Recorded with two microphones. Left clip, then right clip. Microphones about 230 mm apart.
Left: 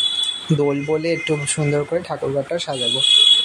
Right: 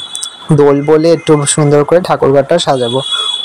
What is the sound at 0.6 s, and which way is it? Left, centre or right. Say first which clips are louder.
Speech: right 14 dB; right.